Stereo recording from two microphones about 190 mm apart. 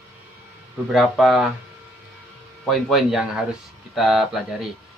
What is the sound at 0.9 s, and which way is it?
Speech, centre (ahead or behind).